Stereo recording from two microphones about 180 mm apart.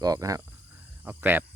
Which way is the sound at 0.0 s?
20° right (ahead or behind).